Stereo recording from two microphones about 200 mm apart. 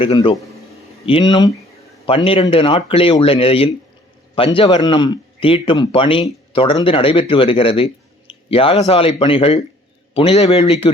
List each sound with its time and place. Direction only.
0.0 s speech: 25° left (ahead or behind)
8.3 s a sound: 25° left (ahead or behind)
8.9 s speech: 30° left (ahead or behind)